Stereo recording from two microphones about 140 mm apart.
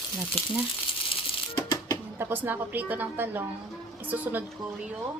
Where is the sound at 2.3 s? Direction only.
15° right (ahead or behind).